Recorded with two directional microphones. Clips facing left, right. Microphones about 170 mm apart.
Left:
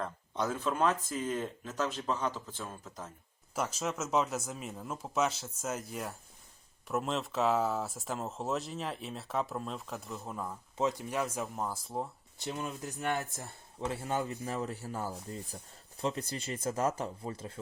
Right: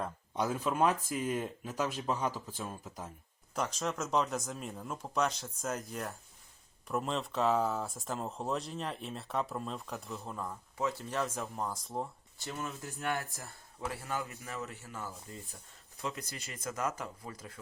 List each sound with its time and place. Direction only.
0.0 s speech: 10° right (ahead or behind)
3.5 s speech: 5° left (ahead or behind)
10.8 s speech: 15° left (ahead or behind)
12.5 s speech: 20° left (ahead or behind)
14.2 s speech: 35° left (ahead or behind)